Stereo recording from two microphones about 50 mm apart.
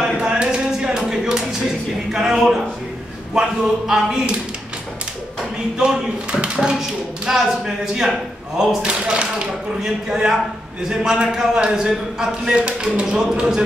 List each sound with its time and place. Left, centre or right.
0.2 s a sound: centre
2.0 s a man's voice: centre
5.8 s a man's voice: centre